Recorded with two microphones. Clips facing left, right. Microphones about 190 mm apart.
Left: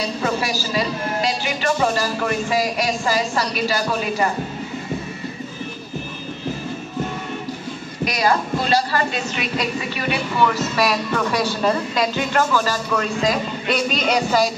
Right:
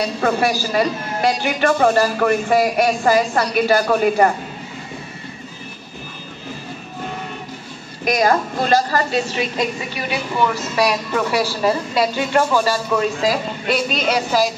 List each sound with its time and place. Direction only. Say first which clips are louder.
0.2 s a man's voice: right 7 dB; 55° right (ahead or behind)
8.0 s a woman's voice: right 3 dB; 50° right (ahead or behind)
9.1 s a woman's voice: right 4 dB; 30° right (ahead or behind)
10.8 s speech: right 3 dB; 10° right (ahead or behind)